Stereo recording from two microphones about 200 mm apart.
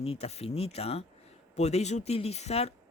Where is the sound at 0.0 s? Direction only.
30° left (ahead or behind).